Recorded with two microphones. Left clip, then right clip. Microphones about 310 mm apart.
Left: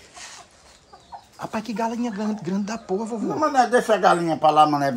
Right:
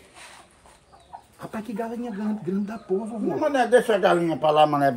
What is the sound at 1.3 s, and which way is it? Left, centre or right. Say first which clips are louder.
Speech: left 5 dB; centre.